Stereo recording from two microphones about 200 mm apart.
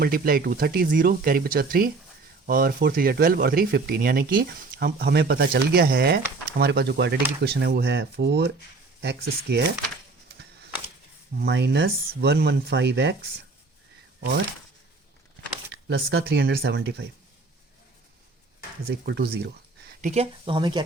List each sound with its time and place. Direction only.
0.0 s speech: 45° right (ahead or behind)
11.3 s speech: 60° right (ahead or behind)
15.9 s speech: 55° right (ahead or behind)
18.9 s speech: 55° right (ahead or behind)
20.0 s speech: 35° right (ahead or behind)